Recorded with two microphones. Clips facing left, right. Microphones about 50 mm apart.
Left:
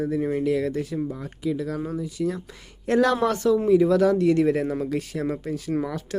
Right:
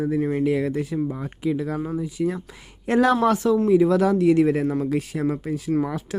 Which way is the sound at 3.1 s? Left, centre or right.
Centre.